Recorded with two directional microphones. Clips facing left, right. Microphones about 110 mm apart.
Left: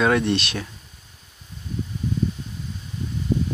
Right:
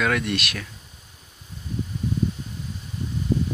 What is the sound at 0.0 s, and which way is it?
Speech, 30° left (ahead or behind).